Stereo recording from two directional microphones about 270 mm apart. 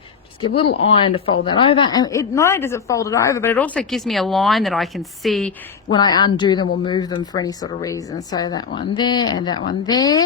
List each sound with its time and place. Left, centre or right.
0.4 s speech: centre
5.9 s speech: centre